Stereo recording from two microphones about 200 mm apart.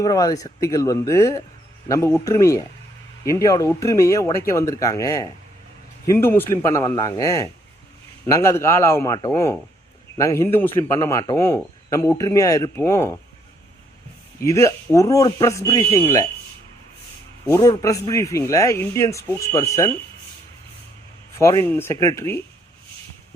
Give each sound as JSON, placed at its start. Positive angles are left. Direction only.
{"t": 0.0, "sound": "a man's voice", "side_deg": 20}
{"t": 14.4, "sound": "a man's voice", "side_deg": 15}
{"t": 17.4, "sound": "a man's voice", "side_deg": 15}
{"t": 21.3, "sound": "a man's voice", "side_deg": 15}